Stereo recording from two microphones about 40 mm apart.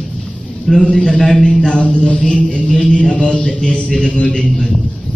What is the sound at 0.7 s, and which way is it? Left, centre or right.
A man's voice, centre.